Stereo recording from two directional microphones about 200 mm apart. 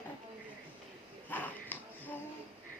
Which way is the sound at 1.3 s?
10° left (ahead or behind).